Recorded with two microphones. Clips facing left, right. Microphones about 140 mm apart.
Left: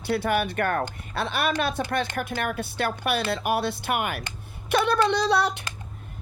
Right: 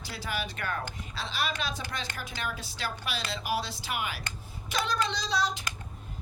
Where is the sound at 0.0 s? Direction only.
60° left (ahead or behind).